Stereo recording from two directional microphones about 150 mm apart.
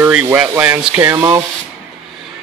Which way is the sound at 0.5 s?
15° right (ahead or behind).